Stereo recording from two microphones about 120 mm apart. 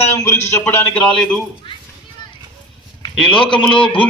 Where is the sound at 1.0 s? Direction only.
10° left (ahead or behind).